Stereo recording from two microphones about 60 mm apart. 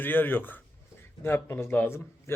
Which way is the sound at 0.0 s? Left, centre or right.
Left.